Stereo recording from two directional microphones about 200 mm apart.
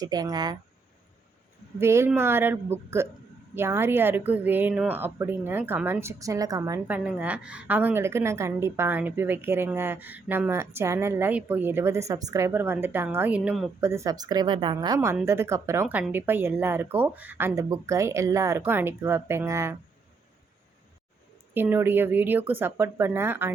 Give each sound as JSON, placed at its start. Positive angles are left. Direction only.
{"t": 0.0, "sound": "speech", "side_deg": -20}
{"t": 1.8, "sound": "speech", "side_deg": -15}
{"t": 21.5, "sound": "speech", "side_deg": -10}